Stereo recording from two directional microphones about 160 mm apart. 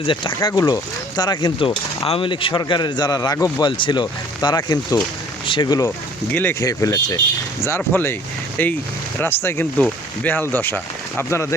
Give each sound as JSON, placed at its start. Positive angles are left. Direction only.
{"t": 0.0, "sound": "speech", "side_deg": 30}
{"t": 6.3, "sound": "speech", "side_deg": 15}